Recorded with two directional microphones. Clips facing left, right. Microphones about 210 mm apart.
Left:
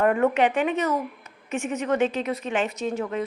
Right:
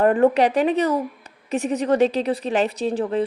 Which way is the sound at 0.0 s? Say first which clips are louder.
Right 4 dB; 35° right (ahead or behind).